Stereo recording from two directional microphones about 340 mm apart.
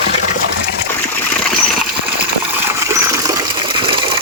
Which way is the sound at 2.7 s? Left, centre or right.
Centre.